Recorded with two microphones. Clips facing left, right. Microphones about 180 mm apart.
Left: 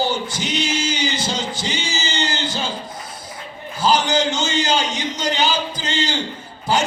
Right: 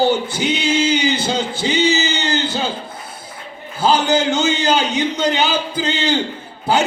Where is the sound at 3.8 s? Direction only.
60° right (ahead or behind).